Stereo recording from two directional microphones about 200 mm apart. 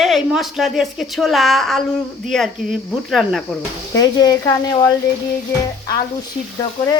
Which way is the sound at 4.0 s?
20° left (ahead or behind).